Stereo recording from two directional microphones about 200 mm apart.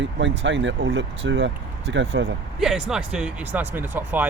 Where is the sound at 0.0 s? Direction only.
65° right (ahead or behind).